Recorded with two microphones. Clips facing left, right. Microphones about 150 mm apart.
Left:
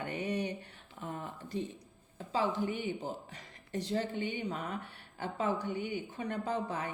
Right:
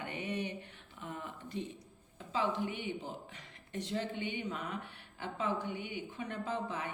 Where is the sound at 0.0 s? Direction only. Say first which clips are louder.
Left 3 dB; 40° left (ahead or behind).